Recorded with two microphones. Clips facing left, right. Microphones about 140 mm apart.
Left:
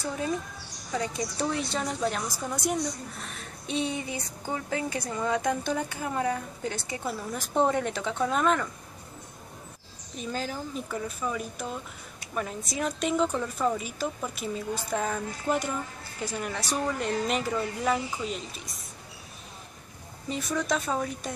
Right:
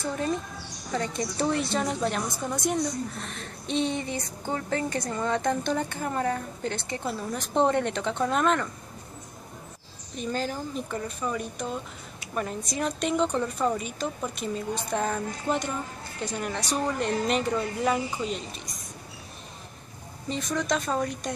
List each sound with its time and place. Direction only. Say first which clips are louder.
0.9 s a woman's voice: right 1 dB; 10° left (ahead or behind)
1.4 s a woman's voice: right 4 dB; centre (ahead or behind)
10.1 s a woman's voice: right 3 dB; centre (ahead or behind)
20.2 s a woman's voice: right 1 dB; 5° left (ahead or behind)